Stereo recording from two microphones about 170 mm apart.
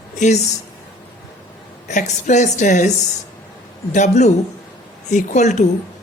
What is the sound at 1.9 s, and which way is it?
Speech, 45° left (ahead or behind).